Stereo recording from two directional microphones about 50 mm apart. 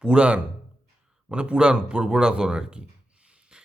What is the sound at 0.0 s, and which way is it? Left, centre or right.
Speech, right.